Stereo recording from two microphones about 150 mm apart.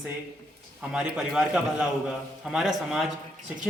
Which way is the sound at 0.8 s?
5° right (ahead or behind).